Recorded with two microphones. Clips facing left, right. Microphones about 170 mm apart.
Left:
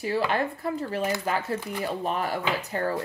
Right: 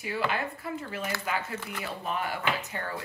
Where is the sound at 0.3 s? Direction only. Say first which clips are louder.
Left 6 dB; 40° left (ahead or behind).